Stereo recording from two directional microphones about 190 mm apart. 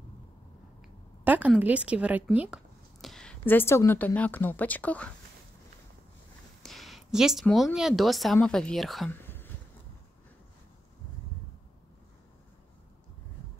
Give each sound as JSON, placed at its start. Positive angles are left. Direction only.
{"t": 1.2, "sound": "a woman's voice", "side_deg": -10}
{"t": 6.6, "sound": "speech", "side_deg": 0}